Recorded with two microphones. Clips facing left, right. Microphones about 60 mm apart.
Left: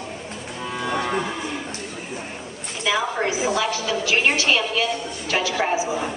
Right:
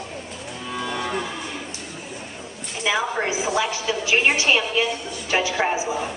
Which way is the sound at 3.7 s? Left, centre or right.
Centre.